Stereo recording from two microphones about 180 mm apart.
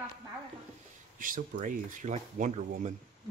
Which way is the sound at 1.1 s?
50° right (ahead or behind).